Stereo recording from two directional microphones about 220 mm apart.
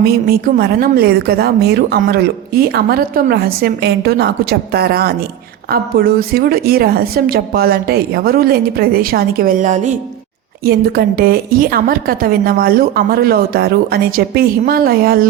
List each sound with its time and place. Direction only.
0.0 s a woman's voice: 45° right (ahead or behind)
10.7 s a woman's voice: 45° right (ahead or behind)